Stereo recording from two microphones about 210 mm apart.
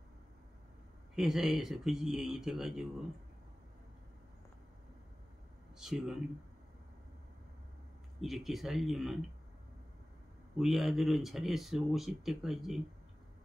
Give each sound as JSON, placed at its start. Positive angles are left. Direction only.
{"t": 1.1, "sound": "speech", "side_deg": 0}
{"t": 5.8, "sound": "speech", "side_deg": 0}
{"t": 8.2, "sound": "speech", "side_deg": 0}
{"t": 10.6, "sound": "speech", "side_deg": 0}